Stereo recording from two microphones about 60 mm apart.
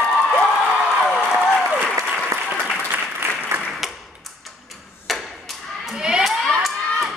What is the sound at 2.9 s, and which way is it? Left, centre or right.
Applause, right.